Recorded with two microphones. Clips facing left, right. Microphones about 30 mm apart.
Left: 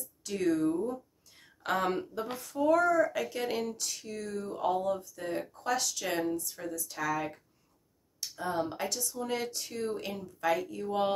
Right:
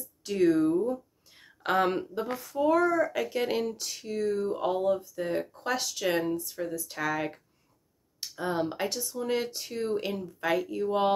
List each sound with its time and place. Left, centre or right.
0.2 s speech: right
2.2 s speech: centre
2.6 s speech: centre
6.7 s speech: right
9.0 s speech: centre